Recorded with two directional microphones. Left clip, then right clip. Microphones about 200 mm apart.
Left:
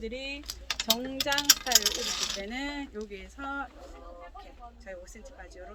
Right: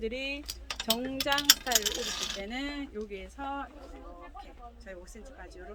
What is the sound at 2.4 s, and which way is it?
Speech, 10° right (ahead or behind).